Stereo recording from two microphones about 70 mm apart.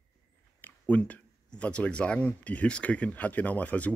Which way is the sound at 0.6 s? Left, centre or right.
Left.